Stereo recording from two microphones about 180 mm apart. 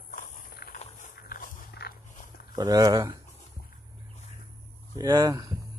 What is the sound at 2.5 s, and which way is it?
Speech, 20° right (ahead or behind).